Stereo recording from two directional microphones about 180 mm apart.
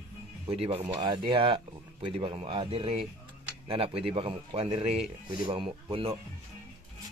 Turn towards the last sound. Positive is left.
turn(degrees=-30)  # may be behind; listen again after turning